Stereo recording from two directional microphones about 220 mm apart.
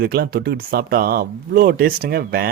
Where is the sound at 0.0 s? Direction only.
45° right (ahead or behind).